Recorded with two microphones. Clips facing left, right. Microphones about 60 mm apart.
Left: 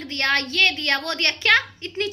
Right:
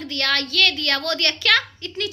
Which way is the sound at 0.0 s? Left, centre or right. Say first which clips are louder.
Left 1 dB; left.